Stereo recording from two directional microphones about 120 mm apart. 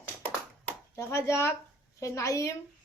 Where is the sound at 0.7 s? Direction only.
25° left (ahead or behind).